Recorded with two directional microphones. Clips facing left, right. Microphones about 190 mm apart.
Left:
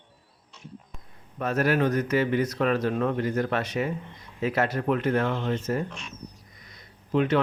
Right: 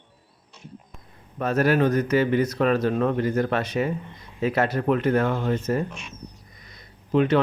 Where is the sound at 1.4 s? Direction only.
35° right (ahead or behind).